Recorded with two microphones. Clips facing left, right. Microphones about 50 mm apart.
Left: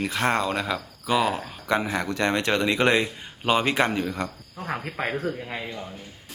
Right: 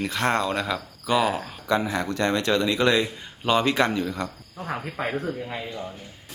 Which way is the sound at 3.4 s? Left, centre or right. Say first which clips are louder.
Right 1 dB; centre.